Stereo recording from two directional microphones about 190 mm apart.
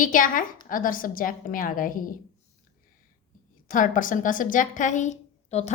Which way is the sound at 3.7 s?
45° left (ahead or behind).